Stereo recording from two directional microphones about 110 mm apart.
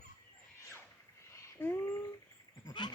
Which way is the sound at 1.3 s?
25° left (ahead or behind).